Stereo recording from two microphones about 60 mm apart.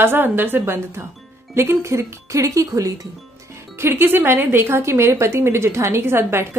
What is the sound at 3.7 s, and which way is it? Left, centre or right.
A woman's voice, right.